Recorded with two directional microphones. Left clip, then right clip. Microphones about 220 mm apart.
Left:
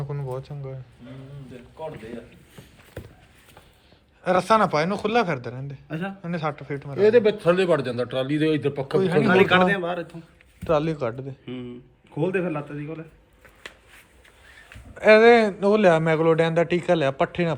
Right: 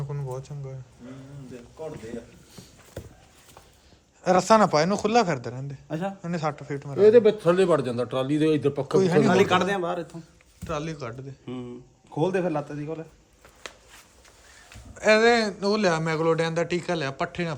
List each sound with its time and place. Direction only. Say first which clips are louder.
0.0 s a sound: left 3 dB; 10° right (ahead or behind)
3.0 s horse: left 1 dB; 15° right (ahead or behind)
4.2 s speech: even; 20° right (ahead or behind)
5.9 s speech: right 2 dB; 30° right (ahead or behind)
6.2 s a man's voice: left 1 dB; 15° right (ahead or behind)
6.9 s a man's voice: right 1 dB; 55° right (ahead or behind)
10.6 s a man's voice: left 9 dB; centre (ahead or behind)
11.4 s a man's voice: left 1 dB; 50° right (ahead or behind)
15.0 s a man's voice: left 5 dB; 15° right (ahead or behind)